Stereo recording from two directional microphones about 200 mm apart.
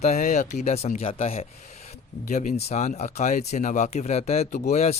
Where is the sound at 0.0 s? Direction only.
35° left (ahead or behind).